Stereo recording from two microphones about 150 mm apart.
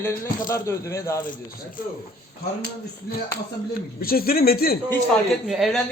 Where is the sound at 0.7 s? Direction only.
20° left (ahead or behind).